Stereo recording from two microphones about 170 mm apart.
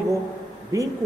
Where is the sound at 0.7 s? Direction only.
20° right (ahead or behind).